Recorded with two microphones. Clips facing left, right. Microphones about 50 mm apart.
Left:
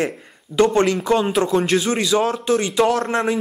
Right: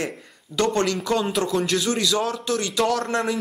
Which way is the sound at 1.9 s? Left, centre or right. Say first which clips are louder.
Left 4 dB; left.